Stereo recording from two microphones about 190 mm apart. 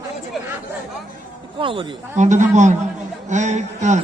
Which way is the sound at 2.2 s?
40° right (ahead or behind).